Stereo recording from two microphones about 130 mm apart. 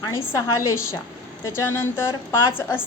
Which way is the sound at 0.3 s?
20° left (ahead or behind).